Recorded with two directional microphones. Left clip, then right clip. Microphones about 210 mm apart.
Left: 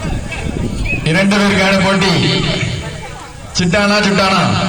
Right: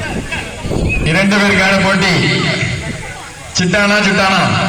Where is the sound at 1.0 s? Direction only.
40° left (ahead or behind).